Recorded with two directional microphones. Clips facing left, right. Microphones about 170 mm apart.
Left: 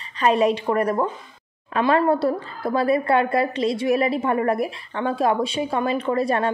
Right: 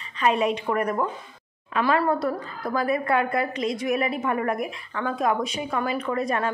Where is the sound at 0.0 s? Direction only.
35° left (ahead or behind).